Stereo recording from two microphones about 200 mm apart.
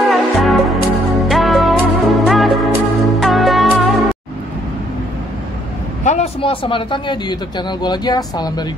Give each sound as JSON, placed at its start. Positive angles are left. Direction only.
{"t": 0.1, "sound": "music", "side_deg": 0}
{"t": 6.0, "sound": "speech", "side_deg": 30}